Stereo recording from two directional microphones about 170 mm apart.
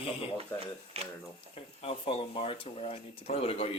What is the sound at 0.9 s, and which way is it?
Speech, 35° right (ahead or behind).